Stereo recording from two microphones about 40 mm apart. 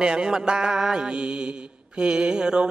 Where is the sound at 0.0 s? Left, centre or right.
Right.